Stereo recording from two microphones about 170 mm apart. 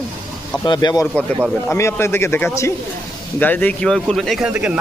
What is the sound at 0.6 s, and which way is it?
A man's voice, 25° left (ahead or behind).